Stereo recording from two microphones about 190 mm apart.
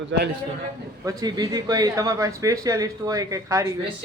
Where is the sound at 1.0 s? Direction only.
20° right (ahead or behind).